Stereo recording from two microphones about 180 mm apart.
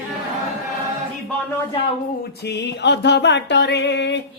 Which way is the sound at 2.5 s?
70° left (ahead or behind).